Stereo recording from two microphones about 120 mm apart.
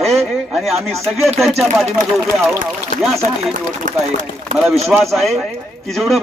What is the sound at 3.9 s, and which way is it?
Speech, 90° right.